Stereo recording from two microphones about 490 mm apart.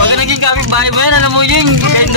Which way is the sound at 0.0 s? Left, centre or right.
Right.